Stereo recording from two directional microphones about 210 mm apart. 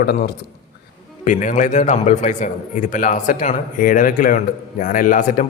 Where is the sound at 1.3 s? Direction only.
35° left (ahead or behind).